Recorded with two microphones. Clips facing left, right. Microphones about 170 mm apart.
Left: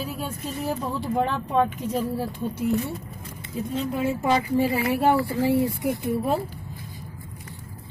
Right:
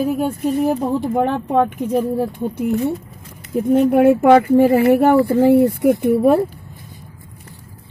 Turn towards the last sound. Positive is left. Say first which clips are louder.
# right 11 dB
turn(degrees=-60)  # may be behind; listen again after turning